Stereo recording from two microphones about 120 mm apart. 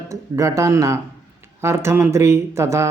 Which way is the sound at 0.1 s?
25° right (ahead or behind).